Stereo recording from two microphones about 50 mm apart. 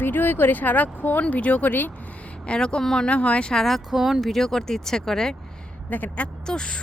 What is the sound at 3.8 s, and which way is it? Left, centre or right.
Speech, centre.